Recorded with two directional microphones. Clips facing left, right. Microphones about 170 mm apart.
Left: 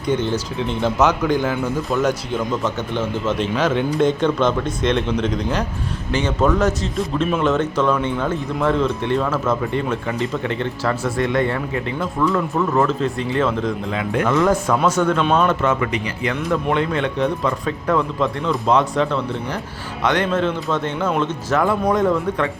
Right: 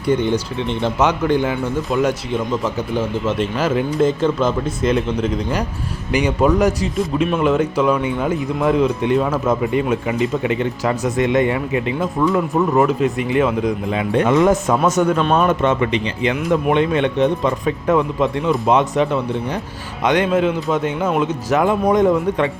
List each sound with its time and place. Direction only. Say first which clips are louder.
0.0 s speech: right 3 dB; 10° right (ahead or behind)
0.5 s speech: even; 5° left (ahead or behind)
0.9 s speech: even; 10° right (ahead or behind)
1.3 s speech: right 2 dB; 5° left (ahead or behind)
2.0 s speech: right 2 dB; 10° right (ahead or behind)
15.1 s speech: right 1 dB; centre (ahead or behind)
15.4 s speech: right 2 dB; 25° right (ahead or behind)